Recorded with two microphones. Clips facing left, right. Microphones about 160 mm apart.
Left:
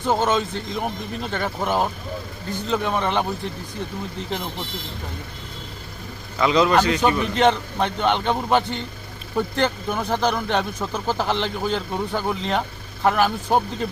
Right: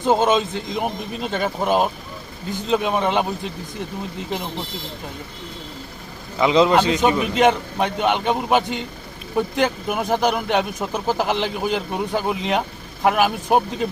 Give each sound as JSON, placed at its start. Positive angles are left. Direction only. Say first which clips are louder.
{"t": 0.0, "sound": "speech", "louder": "right 3 dB", "side_deg": -15}
{"t": 6.4, "sound": "speech", "louder": "right 2 dB", "side_deg": -20}